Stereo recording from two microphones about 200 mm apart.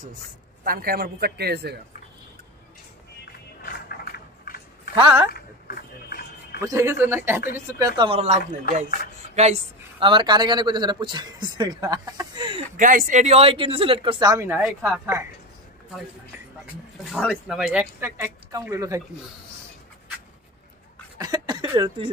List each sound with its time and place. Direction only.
0.7 s speech: 50° right (ahead or behind)
3.6 s a sound: 45° left (ahead or behind)
4.9 s speech: 20° right (ahead or behind)
5.3 s a sound: 50° left (ahead or behind)
6.6 s speech: 15° right (ahead or behind)
8.1 s speech: 35° right (ahead or behind)
12.7 s speech: 45° right (ahead or behind); by 15.2 s 10° right (ahead or behind)
17.0 s speech: centre (ahead or behind)
21.2 s speech: 20° right (ahead or behind)